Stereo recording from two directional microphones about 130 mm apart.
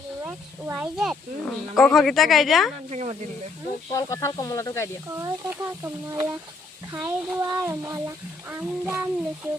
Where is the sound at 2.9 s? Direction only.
60° right (ahead or behind).